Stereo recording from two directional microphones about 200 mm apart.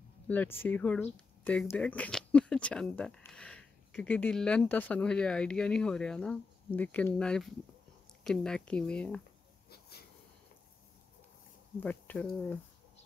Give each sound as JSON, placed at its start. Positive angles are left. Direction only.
{"t": 0.3, "sound": "speech", "side_deg": 10}
{"t": 9.7, "sound": "a sound", "side_deg": 55}
{"t": 11.8, "sound": "speech", "side_deg": 10}